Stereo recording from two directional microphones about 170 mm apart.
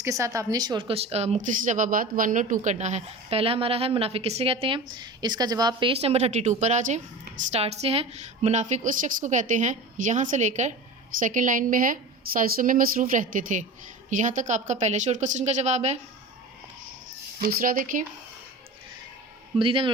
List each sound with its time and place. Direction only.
0.0 s a woman's voice: 20° right (ahead or behind); by 16.0 s 40° right (ahead or behind)
17.4 s speech: 55° right (ahead or behind)
19.5 s a woman's voice: 30° right (ahead or behind)